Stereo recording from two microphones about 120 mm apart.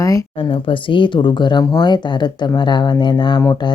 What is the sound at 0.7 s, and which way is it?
Speech, 45° left (ahead or behind).